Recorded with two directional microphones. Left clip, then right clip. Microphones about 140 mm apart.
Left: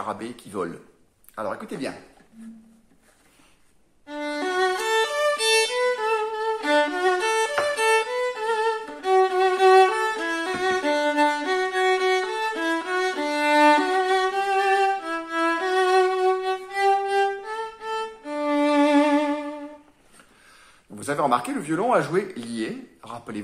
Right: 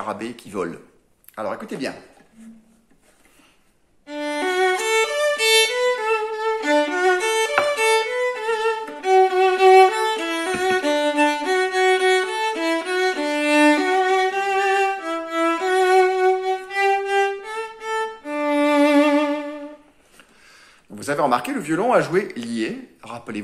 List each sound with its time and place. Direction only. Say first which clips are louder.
0.0 s speech: right 3 dB; 20° right (ahead or behind)
4.0 s violin: right 4 dB; 20° right (ahead or behind)
17.5 s violin: right 3 dB; 40° right (ahead or behind)
18.2 s violin: right 2 dB; 20° right (ahead or behind)
20.9 s speech: right 3 dB; 20° right (ahead or behind)